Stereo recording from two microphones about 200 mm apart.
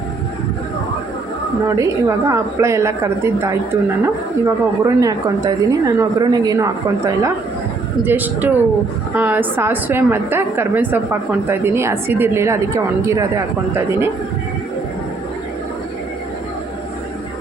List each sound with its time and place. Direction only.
1.6 s a woman's voice: 15° right (ahead or behind)